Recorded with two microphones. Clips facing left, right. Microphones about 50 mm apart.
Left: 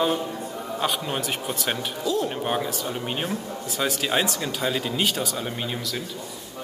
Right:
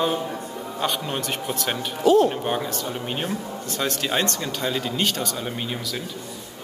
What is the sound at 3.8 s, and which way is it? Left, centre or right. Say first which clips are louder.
Speech: even; centre.